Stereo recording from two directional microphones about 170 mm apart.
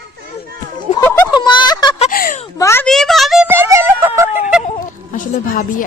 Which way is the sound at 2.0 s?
55° left (ahead or behind).